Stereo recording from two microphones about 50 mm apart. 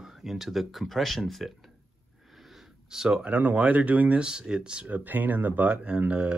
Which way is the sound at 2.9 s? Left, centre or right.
Centre.